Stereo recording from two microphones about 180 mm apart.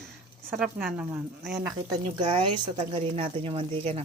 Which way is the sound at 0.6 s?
5° right (ahead or behind).